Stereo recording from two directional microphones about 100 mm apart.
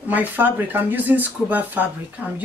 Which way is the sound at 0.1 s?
20° right (ahead or behind).